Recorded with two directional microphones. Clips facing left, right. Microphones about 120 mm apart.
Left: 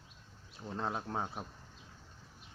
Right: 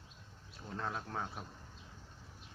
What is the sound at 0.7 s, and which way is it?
Speech, 25° left (ahead or behind).